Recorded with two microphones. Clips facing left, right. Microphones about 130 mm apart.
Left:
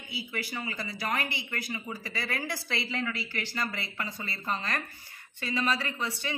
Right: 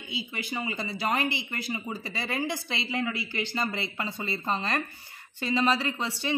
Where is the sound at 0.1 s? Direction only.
20° right (ahead or behind).